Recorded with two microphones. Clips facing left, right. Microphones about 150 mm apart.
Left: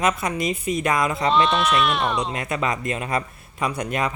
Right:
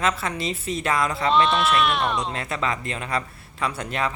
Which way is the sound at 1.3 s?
Centre (ahead or behind).